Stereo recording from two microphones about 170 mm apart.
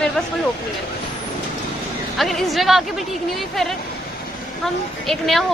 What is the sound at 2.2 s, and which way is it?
Speech, centre (ahead or behind).